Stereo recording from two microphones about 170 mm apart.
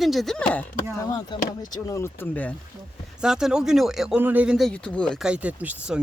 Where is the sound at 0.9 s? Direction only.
20° left (ahead or behind).